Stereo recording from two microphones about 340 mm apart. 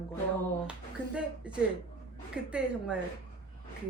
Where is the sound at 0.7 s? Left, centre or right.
Centre.